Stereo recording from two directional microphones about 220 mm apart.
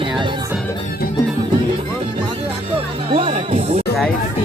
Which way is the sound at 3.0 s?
25° right (ahead or behind).